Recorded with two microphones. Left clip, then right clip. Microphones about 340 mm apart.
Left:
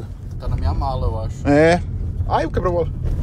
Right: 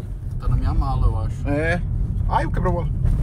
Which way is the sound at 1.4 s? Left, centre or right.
Left.